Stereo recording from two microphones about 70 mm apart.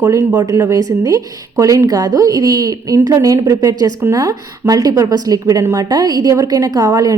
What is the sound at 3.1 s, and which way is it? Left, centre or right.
A woman's voice, right.